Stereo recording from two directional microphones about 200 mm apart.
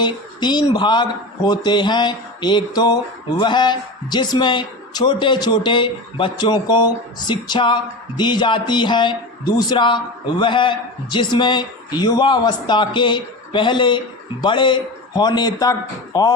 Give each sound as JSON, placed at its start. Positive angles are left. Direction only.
{"t": 0.0, "sound": "speech", "side_deg": 20}